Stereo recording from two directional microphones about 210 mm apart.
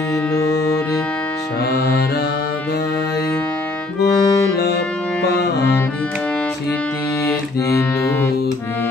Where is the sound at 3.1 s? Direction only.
10° left (ahead or behind).